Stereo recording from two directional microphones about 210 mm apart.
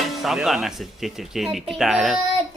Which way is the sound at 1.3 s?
Centre (ahead or behind).